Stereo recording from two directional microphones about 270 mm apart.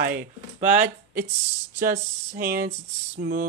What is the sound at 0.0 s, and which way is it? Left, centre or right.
Speech, right.